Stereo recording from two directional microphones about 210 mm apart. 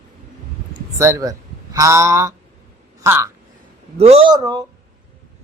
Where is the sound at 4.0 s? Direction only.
30° right (ahead or behind).